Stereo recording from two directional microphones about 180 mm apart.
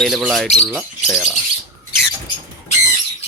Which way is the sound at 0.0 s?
Centre (ahead or behind).